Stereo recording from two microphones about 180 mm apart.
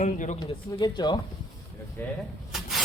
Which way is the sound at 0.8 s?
20° left (ahead or behind).